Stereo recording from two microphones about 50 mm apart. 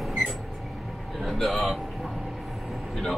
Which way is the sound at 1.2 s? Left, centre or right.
Centre.